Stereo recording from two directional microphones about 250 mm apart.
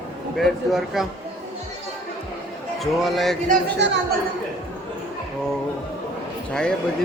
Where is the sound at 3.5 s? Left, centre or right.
Right.